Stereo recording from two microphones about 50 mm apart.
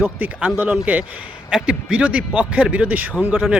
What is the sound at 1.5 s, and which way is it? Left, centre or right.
A man's voice, centre.